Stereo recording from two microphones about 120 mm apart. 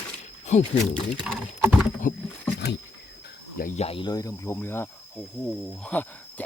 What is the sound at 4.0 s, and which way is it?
Speech, 30° left (ahead or behind).